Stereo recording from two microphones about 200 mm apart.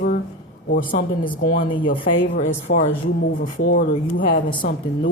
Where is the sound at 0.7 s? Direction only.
45° left (ahead or behind).